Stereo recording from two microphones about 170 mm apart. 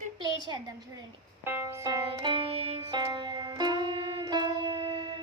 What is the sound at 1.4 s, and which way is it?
Music, 10° right (ahead or behind).